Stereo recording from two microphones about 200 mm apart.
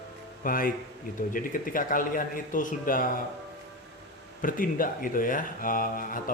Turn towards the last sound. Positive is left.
turn(degrees=45)  # may be behind; listen again after turning